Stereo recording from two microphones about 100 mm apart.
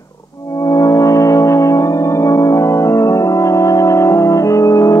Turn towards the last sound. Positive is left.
turn(degrees=35)  # may be behind; listen again after turning